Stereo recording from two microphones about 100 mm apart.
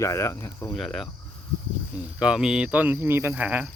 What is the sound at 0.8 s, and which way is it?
Speech, centre (ahead or behind).